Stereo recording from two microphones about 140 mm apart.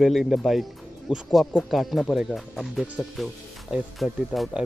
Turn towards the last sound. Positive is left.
turn(degrees=-5)  # may be behind; listen again after turning